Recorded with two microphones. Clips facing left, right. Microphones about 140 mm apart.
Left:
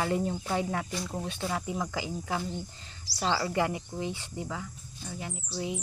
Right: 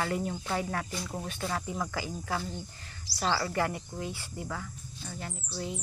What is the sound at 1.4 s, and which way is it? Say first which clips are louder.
Speech: left 1 dB; 15° left (ahead or behind).